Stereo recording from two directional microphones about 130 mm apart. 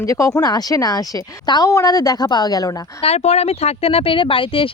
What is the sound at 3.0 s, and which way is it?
Speech, 55° left (ahead or behind).